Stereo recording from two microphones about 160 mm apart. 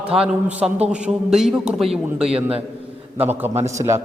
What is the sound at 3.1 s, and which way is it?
Speech, 10° right (ahead or behind).